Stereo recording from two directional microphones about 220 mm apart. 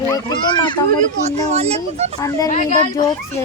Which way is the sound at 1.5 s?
30° right (ahead or behind).